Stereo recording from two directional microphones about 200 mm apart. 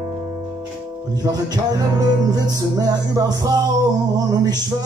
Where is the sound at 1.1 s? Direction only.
20° right (ahead or behind).